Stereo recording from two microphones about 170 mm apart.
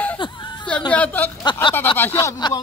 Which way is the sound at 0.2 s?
25° left (ahead or behind).